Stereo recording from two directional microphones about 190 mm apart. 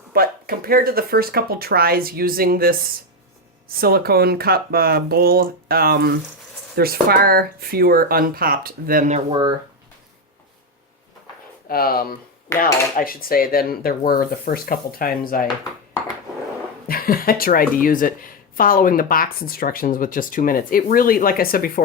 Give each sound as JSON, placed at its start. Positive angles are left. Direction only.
{"t": 0.1, "sound": "speech", "side_deg": -50}
{"t": 9.3, "sound": "speech", "side_deg": -20}
{"t": 11.7, "sound": "a woman's voice", "side_deg": 50}
{"t": 16.9, "sound": "a woman's voice", "side_deg": 50}